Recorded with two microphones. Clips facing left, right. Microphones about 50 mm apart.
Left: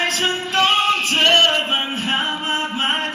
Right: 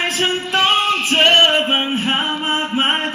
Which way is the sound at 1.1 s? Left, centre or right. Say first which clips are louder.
Right 4 dB; right.